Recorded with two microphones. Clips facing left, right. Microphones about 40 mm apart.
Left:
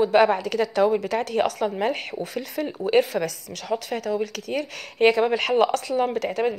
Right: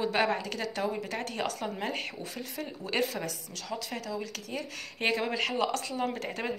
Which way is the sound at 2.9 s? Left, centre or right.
Left.